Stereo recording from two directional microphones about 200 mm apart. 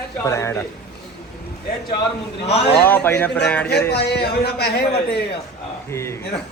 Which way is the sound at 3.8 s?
55° left (ahead or behind).